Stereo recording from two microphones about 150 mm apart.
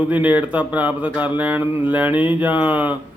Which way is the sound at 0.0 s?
10° right (ahead or behind).